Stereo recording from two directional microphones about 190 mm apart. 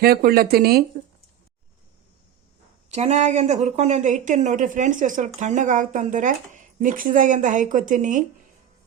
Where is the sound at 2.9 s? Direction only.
35° right (ahead or behind).